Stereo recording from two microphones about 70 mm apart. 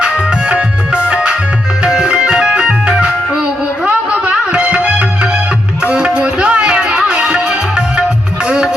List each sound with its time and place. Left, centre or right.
0.0 s music: centre